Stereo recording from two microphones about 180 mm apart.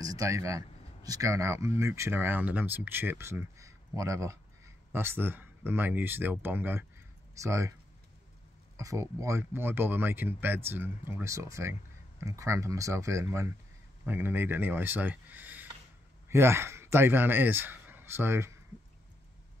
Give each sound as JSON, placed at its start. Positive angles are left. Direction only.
{"t": 0.0, "sound": "speech", "side_deg": -20}
{"t": 8.7, "sound": "speech", "side_deg": -15}